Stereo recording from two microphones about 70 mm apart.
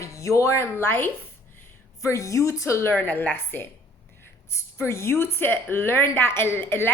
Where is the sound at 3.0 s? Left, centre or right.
Left.